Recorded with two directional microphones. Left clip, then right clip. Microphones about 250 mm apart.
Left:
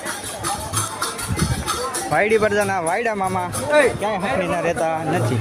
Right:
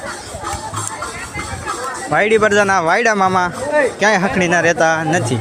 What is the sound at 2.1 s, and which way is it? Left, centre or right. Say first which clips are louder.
Speech: right 5 dB; centre.